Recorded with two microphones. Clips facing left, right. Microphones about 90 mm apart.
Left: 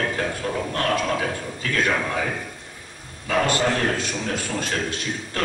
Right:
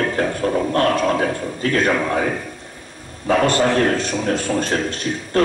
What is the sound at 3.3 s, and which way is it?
A man's voice, 40° right (ahead or behind).